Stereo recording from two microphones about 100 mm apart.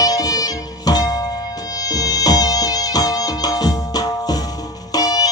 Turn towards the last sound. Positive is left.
turn(degrees=40)  # may be behind; listen again after turning